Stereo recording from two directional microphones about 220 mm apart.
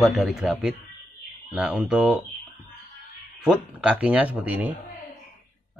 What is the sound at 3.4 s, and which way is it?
Speech, 5° right (ahead or behind).